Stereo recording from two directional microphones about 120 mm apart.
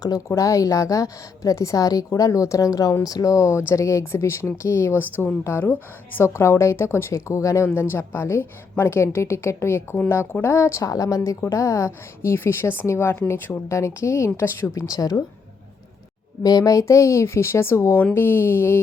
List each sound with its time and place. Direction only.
0.0 s a woman's voice: 30° left (ahead or behind)
16.4 s a woman's voice: 30° left (ahead or behind)